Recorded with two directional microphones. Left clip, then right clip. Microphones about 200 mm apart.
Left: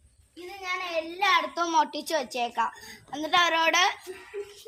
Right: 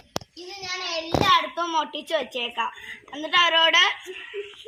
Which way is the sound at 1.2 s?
25° left (ahead or behind).